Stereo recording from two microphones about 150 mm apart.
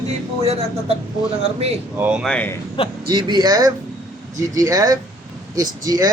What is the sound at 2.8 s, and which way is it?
Speech, 35° left (ahead or behind).